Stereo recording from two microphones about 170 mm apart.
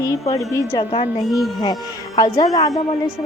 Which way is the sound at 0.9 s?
35° left (ahead or behind).